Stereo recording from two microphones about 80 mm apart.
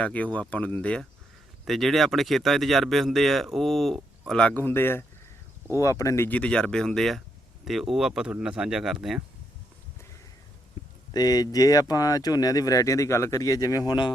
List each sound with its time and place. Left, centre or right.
0.0 s speech: centre
1.6 s speech: centre
4.5 s speech: left
5.7 s speech: left
6.2 s speech: centre
10.8 s a sound: left
11.1 s speech: left